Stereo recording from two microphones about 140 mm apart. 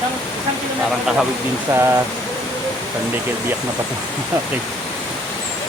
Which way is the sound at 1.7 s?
20° right (ahead or behind).